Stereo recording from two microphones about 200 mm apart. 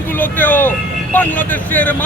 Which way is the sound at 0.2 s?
10° left (ahead or behind).